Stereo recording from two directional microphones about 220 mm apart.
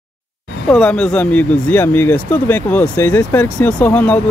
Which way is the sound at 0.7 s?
5° left (ahead or behind).